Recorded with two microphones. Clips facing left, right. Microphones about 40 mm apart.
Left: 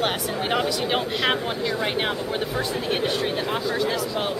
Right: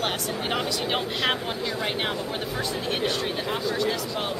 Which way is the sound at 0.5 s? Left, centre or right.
Centre.